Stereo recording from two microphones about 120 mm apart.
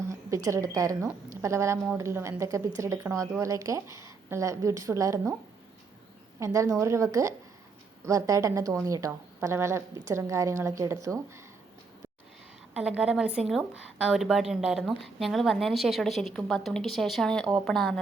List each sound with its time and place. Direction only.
0.1 s a woman's voice: 25° right (ahead or behind)
6.4 s a woman's voice: 25° right (ahead or behind)
12.7 s a woman's voice: 10° right (ahead or behind)